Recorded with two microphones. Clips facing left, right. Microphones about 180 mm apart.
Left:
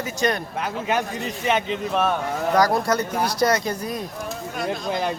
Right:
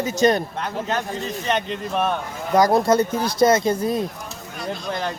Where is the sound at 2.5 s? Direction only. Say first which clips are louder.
Right 5 dB; 20° right (ahead or behind).